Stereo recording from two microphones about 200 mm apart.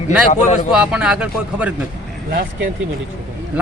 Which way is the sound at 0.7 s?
5° right (ahead or behind).